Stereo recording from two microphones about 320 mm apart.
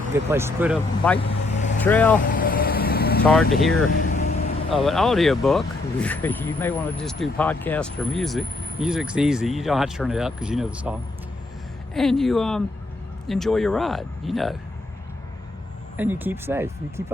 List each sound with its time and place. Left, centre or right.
0.1 s speech: centre
1.3 s vehicle: left
1.8 s speech: centre
2.3 s vehicle: left
3.2 s speech: centre
3.9 s vehicle: left
4.7 s speech: centre
11.9 s speech: centre
16.0 s speech: centre